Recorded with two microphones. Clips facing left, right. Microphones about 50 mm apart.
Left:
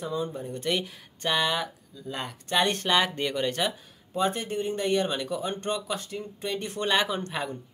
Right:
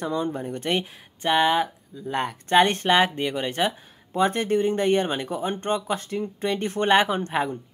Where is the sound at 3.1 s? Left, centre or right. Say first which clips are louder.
Right 1 dB; centre.